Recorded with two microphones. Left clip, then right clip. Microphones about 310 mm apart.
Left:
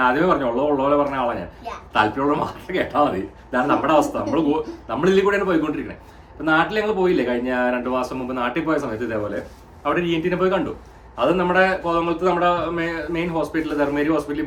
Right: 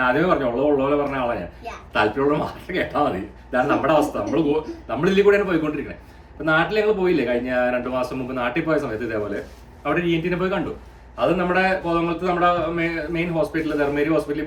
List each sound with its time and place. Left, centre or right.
0.0 s speech: centre